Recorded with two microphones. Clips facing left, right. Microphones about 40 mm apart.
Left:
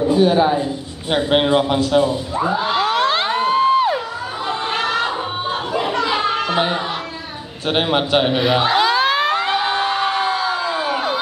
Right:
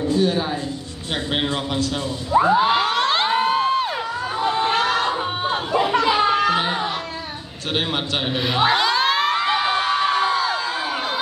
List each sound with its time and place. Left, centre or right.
0.1 s a man's voice: centre
2.4 s a sound: centre
7.7 s a man's voice: centre
8.4 s a man's voice: centre
8.7 s crowd: centre